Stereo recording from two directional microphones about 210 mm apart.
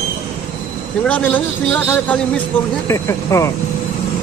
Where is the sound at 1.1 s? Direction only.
5° left (ahead or behind).